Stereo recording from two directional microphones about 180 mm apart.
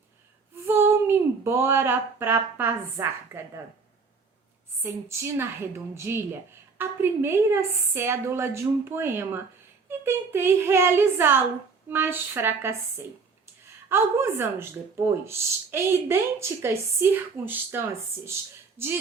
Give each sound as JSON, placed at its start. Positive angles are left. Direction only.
{"t": 0.5, "sound": "speech", "side_deg": -15}
{"t": 4.8, "sound": "speech", "side_deg": -15}
{"t": 13.9, "sound": "speech", "side_deg": -15}